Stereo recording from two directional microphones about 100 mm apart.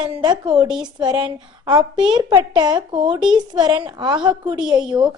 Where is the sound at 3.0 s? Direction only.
10° right (ahead or behind).